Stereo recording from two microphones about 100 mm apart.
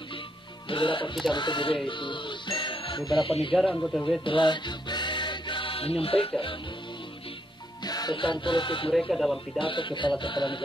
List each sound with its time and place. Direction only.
0.7 s a man's voice: 60° left (ahead or behind)
1.9 s music: 55° left (ahead or behind)
3.1 s speech: 55° left (ahead or behind)
3.5 s speech: 5° left (ahead or behind)
4.2 s music: 55° left (ahead or behind)
7.8 s music: 40° left (ahead or behind)
9.1 s speech: centre (ahead or behind)
9.6 s a man's voice: 55° left (ahead or behind)